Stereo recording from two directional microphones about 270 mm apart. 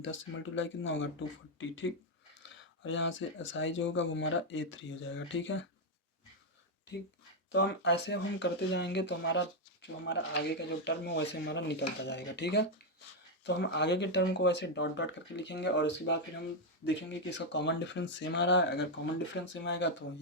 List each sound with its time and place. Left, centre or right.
0.0 s speech: left
7.5 s speech: left